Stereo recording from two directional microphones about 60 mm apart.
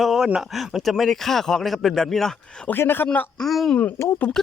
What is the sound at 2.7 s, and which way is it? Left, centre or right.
Speech, left.